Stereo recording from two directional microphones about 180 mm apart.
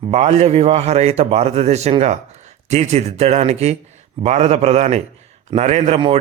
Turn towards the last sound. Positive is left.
turn(degrees=-40)  # may be behind; listen again after turning